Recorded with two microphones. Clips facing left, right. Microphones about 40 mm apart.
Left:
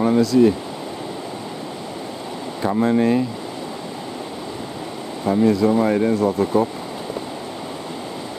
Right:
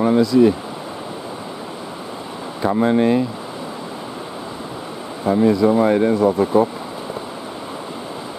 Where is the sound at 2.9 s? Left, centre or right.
Right.